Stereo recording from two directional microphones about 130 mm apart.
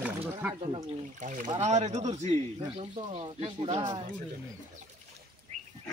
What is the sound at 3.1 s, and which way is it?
Speech, 50° right (ahead or behind).